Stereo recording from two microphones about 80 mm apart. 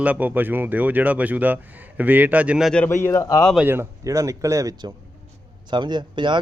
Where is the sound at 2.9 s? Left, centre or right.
Left.